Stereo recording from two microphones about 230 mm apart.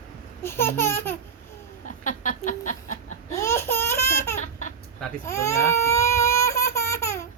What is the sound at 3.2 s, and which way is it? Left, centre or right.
Laughter, centre.